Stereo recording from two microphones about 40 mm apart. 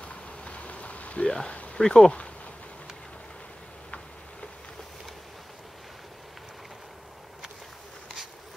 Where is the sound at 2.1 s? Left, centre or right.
Left.